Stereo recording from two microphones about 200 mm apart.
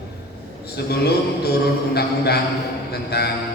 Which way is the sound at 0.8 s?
55° left (ahead or behind).